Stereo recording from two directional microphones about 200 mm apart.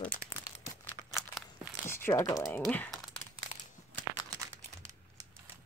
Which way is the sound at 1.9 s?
10° left (ahead or behind).